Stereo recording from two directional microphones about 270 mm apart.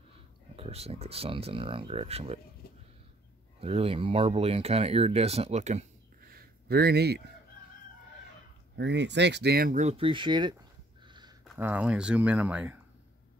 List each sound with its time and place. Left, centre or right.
0.6 s speech: right
3.6 s speech: right
8.7 s speech: right; by 10.5 s centre
11.1 s a sound: centre
11.4 s speech: centre